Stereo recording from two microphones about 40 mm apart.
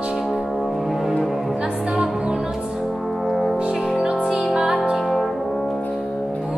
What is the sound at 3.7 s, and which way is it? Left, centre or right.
Music, centre.